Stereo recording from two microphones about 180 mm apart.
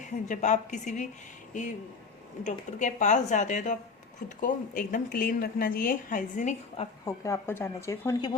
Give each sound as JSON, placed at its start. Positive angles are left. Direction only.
{"t": 0.0, "sound": "a woman's voice", "side_deg": 40}
{"t": 2.4, "sound": "speech", "side_deg": 40}
{"t": 7.0, "sound": "speech", "side_deg": 15}